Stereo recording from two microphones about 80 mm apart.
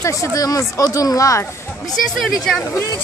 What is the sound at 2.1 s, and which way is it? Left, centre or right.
Speech, centre.